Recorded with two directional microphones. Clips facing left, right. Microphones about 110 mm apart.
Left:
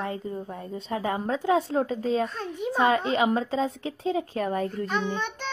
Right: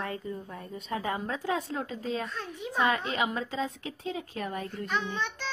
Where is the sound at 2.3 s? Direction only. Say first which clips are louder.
Left 5 dB; 50° left (ahead or behind).